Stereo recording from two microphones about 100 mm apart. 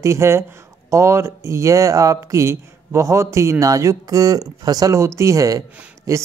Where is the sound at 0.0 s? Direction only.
30° right (ahead or behind).